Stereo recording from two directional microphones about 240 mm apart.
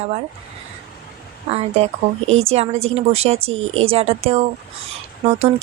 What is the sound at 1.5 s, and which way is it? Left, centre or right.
Speech, right.